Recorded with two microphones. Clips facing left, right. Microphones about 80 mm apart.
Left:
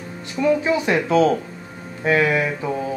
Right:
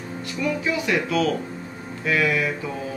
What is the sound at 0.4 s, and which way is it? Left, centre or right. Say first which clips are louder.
Speech: left 7 dB; left.